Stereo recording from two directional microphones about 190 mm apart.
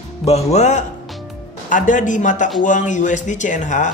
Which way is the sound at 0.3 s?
35° left (ahead or behind).